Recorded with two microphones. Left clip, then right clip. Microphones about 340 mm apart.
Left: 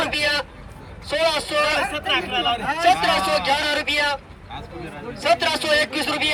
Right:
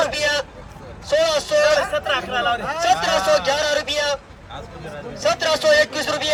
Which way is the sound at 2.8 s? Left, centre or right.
Centre.